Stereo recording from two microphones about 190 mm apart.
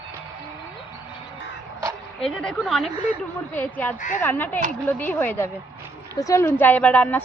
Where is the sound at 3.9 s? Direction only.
40° left (ahead or behind).